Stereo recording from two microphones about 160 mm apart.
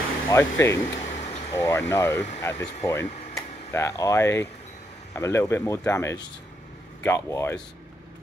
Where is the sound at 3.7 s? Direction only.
20° left (ahead or behind).